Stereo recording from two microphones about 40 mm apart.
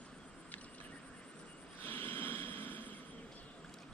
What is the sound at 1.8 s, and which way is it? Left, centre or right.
Vehicle, left.